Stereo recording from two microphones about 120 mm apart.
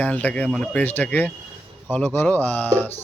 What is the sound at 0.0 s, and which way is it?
Speech, 10° left (ahead or behind).